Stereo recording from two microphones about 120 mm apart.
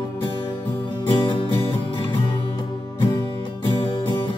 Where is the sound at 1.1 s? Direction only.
45° left (ahead or behind).